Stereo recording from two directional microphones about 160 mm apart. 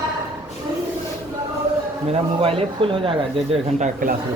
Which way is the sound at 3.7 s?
50° right (ahead or behind).